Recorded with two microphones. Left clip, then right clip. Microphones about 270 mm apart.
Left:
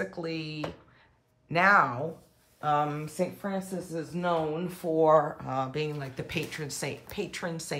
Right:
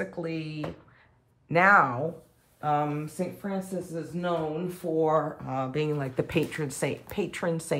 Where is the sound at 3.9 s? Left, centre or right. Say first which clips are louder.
Left 2 dB; left.